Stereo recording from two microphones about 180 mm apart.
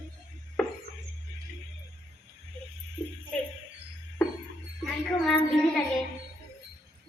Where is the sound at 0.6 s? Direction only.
Centre (ahead or behind).